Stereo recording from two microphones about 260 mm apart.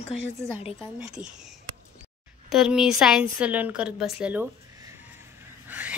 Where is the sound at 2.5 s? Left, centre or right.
Centre.